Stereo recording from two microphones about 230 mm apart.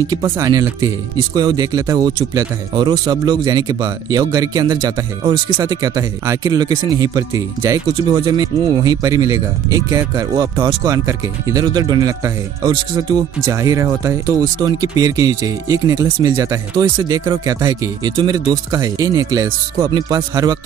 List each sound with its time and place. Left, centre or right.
0.0 s speech: centre